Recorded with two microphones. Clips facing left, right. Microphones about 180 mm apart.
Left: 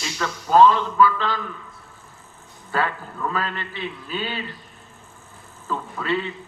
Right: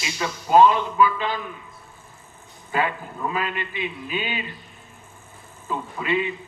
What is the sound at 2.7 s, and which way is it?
A man's voice, 15° right (ahead or behind).